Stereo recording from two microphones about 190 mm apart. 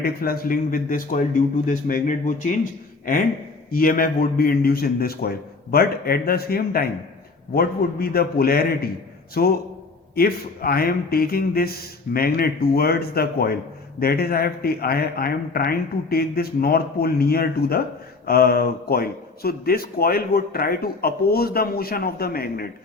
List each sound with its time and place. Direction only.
0.0 s speech: 50° left (ahead or behind)
3.7 s speech: 50° left (ahead or behind)